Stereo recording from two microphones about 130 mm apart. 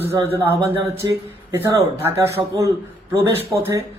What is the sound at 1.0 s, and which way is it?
Speech, 30° right (ahead or behind).